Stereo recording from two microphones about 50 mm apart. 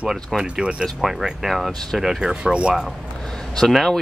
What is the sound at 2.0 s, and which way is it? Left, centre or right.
Speech, centre.